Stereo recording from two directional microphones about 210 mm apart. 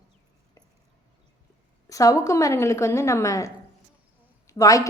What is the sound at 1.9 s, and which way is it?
A woman's voice, 15° left (ahead or behind).